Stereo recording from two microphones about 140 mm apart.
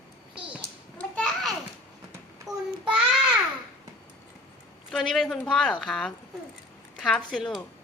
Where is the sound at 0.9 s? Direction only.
10° left (ahead or behind).